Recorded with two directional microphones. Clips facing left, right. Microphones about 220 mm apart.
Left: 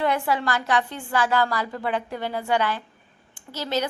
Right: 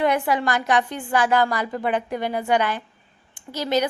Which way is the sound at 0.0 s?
15° right (ahead or behind).